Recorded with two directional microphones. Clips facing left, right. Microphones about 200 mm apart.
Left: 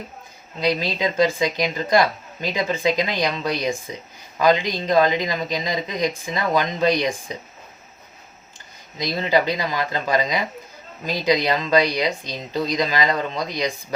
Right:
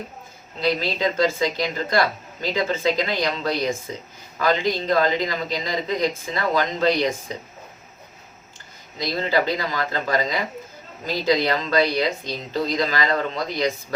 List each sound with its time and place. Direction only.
0.6 s a woman's voice: 15° left (ahead or behind)
9.0 s a woman's voice: 15° left (ahead or behind)